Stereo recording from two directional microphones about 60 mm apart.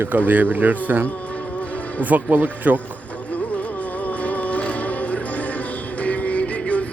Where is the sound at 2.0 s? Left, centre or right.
Right.